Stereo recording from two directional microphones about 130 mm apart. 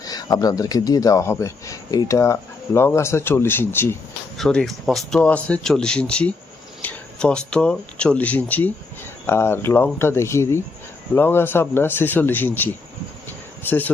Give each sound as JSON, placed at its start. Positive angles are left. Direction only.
{"t": 0.0, "sound": "speech", "side_deg": 30}
{"t": 4.4, "sound": "speech", "side_deg": 5}